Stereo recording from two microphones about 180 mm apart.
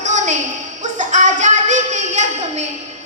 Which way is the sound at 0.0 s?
40° right (ahead or behind).